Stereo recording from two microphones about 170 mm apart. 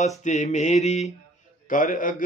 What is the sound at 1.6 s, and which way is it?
Mantra, 50° left (ahead or behind).